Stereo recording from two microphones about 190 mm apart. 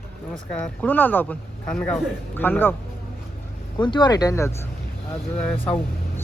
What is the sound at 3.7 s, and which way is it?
Speech, 25° left (ahead or behind).